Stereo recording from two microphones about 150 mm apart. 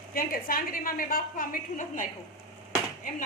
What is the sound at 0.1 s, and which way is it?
A woman's voice, 75° left (ahead or behind).